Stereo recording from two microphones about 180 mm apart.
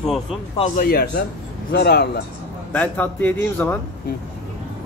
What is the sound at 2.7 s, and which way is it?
A man's voice, 10° left (ahead or behind).